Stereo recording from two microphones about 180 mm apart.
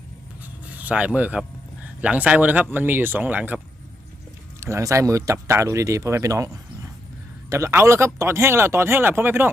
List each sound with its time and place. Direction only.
0.4 s a sound: 10° right (ahead or behind)
2.0 s speech: 5° right (ahead or behind)
4.6 s speech: 15° right (ahead or behind)